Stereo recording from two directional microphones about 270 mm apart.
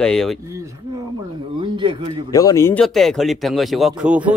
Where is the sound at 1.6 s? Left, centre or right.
Centre.